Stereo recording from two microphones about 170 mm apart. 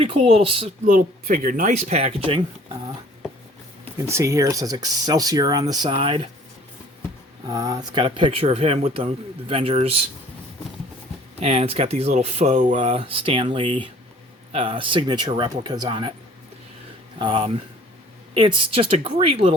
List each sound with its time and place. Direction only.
0.0 s speech: 30° right (ahead or behind)
0.9 s speech: 50° right (ahead or behind); by 2.4 s 35° right (ahead or behind)
4.0 s speech: 15° right (ahead or behind)
7.4 s speech: 20° right (ahead or behind)
11.3 s speech: 35° right (ahead or behind)
17.2 s speech: 30° right (ahead or behind)